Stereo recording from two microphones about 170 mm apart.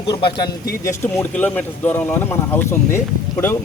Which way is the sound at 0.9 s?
15° left (ahead or behind).